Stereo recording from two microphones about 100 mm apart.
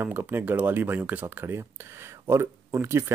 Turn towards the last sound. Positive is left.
turn(degrees=-25)  # may be behind; listen again after turning